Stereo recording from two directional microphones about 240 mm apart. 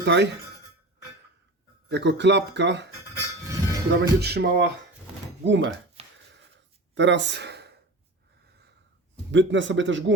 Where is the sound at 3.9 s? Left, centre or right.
Right.